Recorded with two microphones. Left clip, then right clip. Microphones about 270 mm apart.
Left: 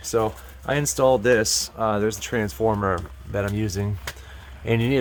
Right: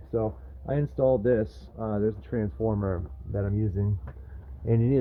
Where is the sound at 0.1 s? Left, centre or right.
Centre.